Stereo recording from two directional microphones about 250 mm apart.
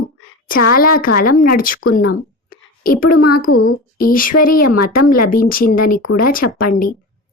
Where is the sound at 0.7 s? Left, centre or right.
Left.